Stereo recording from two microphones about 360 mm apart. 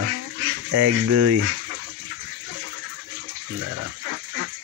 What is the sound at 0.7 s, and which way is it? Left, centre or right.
Speech, right.